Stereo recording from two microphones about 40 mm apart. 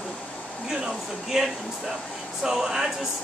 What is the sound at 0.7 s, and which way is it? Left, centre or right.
Speech, centre.